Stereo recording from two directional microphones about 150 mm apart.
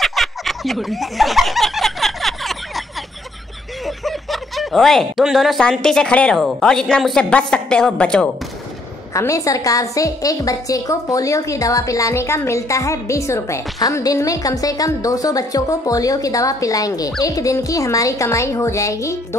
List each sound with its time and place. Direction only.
0.0 s a sound: centre (ahead or behind)
3.8 s speech: centre (ahead or behind)
9.1 s a woman's voice: 20° left (ahead or behind)